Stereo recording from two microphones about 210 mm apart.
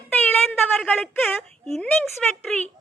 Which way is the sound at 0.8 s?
Centre (ahead or behind).